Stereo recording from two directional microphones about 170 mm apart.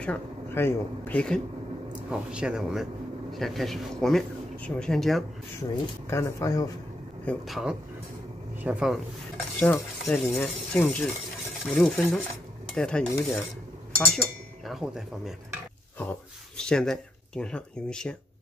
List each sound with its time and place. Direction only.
0.0 s speech: 10° left (ahead or behind)
2.0 s speech: 5° right (ahead or behind)
6.0 s speech: 15° left (ahead or behind)
7.2 s stir: centre (ahead or behind)
9.6 s speech: 5° left (ahead or behind)
11.7 s stir: 5° left (ahead or behind)
13.9 s speech: 5° left (ahead or behind)